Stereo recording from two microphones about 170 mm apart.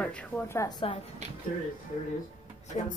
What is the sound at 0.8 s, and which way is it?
Speech, 35° left (ahead or behind).